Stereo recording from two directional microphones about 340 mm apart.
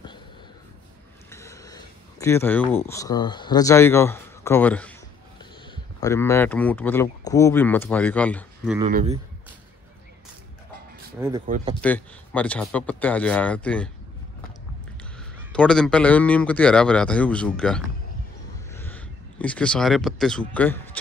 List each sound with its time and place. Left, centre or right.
1.3 s speech: centre
5.9 s speech: centre
8.9 s speech: centre
11.1 s speech: centre
11.4 s speech: right
11.8 s speech: centre
15.1 s speech: centre